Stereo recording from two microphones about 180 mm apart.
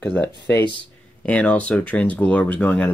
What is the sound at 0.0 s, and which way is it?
Speech, 5° left (ahead or behind).